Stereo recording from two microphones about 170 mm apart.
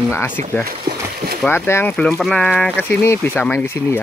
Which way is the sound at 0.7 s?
65° right (ahead or behind).